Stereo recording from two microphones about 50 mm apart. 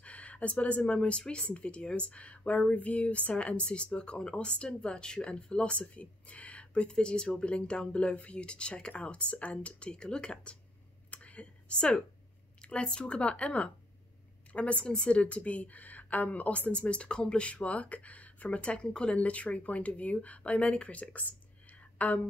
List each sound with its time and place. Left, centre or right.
0.0 s a woman's voice: left
11.1 s a sound: left
12.6 s a woman's voice: centre